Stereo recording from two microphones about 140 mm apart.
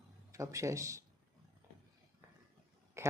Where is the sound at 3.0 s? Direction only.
20° right (ahead or behind).